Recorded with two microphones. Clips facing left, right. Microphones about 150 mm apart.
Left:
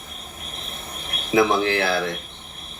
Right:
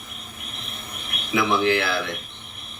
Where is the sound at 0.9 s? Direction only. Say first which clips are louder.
Left 6 dB; 35° left (ahead or behind).